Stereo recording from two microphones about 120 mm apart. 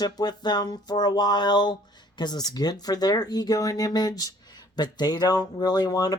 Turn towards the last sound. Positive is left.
turn(degrees=35)  # may be behind; listen again after turning